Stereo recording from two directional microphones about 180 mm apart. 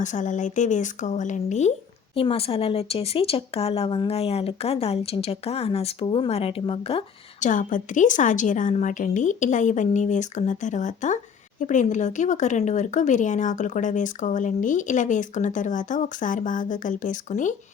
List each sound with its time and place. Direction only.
0.0 s speech: 45° left (ahead or behind)
7.4 s speech: 45° left (ahead or behind)